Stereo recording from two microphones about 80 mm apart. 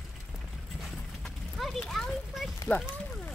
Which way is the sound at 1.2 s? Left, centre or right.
Centre.